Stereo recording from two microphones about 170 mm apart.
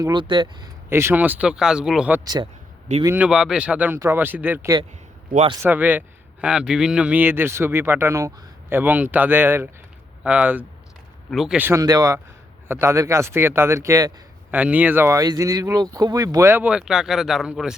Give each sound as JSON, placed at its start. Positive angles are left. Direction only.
{"t": 0.0, "sound": "speech", "side_deg": -25}
{"t": 0.9, "sound": "speech", "side_deg": -15}
{"t": 2.2, "sound": "speech", "side_deg": -25}
{"t": 3.2, "sound": "speech", "side_deg": -5}